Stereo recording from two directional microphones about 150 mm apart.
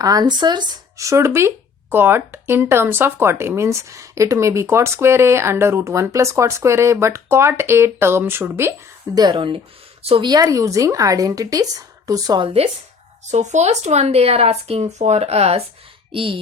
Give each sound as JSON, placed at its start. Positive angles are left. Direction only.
{"t": 0.0, "sound": "speech", "side_deg": -25}
{"t": 9.1, "sound": "speech", "side_deg": -30}
{"t": 10.2, "sound": "a woman's voice", "side_deg": -25}
{"t": 13.3, "sound": "speech", "side_deg": -50}